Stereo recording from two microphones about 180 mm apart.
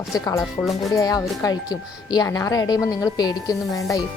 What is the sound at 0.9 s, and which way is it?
A woman's voice, 20° left (ahead or behind).